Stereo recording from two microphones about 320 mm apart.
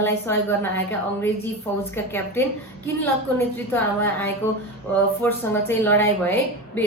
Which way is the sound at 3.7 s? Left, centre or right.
Centre.